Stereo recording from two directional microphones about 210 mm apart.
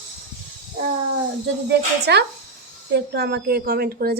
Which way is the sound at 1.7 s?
50° right (ahead or behind).